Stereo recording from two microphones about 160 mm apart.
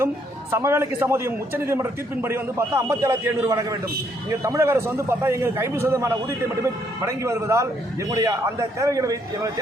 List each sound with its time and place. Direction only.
0.5 s a man's voice: 15° right (ahead or behind)